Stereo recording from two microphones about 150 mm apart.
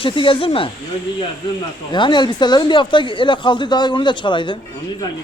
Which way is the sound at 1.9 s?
30° left (ahead or behind).